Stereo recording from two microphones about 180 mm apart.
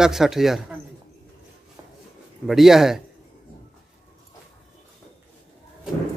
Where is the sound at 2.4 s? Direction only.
Centre (ahead or behind).